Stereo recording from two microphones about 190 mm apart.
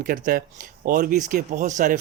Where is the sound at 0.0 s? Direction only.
50° right (ahead or behind).